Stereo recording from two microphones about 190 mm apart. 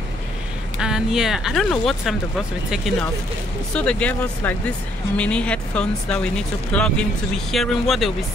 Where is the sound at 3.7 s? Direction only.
5° left (ahead or behind).